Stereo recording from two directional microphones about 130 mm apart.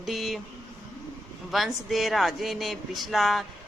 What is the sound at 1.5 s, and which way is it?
Speech, centre (ahead or behind).